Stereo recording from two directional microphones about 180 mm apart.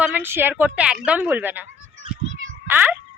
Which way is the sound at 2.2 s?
90° right.